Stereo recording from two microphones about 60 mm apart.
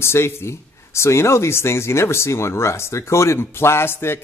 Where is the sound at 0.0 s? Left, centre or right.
Left.